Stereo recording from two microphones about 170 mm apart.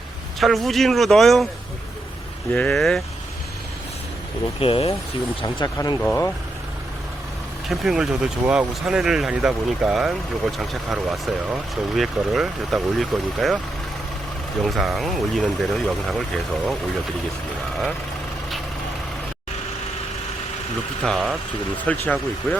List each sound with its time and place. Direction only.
0.3 s speech: centre (ahead or behind)
2.5 s speech: 5° left (ahead or behind)
4.6 s speech: 35° left (ahead or behind); by 6.3 s 15° left (ahead or behind)
7.7 s speech: centre (ahead or behind)
14.6 s speech: centre (ahead or behind)
21.0 s speech: 5° left (ahead or behind)